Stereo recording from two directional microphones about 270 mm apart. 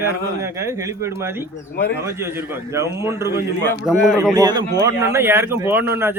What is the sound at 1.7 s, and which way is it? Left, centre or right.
Speech, left.